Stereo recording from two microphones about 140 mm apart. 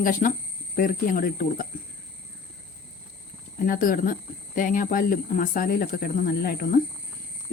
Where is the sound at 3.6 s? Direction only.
80° left.